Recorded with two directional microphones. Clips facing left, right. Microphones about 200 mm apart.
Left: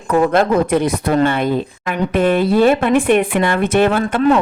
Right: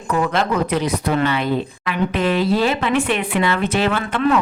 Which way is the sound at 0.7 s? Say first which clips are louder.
Left 4 dB; 50° left (ahead or behind).